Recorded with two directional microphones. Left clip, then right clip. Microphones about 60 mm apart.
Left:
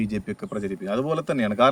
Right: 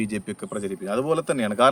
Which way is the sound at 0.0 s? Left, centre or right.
Right.